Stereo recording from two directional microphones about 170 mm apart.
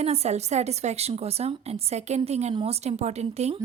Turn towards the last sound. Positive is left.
turn(degrees=-40)  # may be behind; listen again after turning